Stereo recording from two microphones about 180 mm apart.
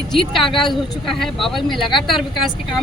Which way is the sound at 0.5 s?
Centre (ahead or behind).